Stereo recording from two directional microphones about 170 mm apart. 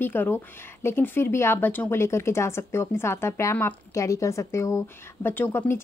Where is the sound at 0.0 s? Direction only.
10° left (ahead or behind).